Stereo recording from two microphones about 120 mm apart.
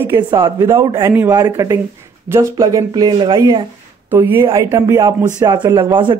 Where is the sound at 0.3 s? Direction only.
35° right (ahead or behind).